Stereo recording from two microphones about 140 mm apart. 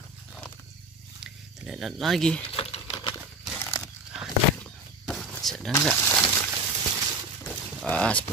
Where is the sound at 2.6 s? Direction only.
40° left (ahead or behind).